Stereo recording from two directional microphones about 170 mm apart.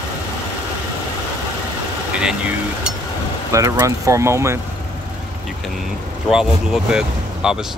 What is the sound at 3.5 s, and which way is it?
Speech, 20° right (ahead or behind).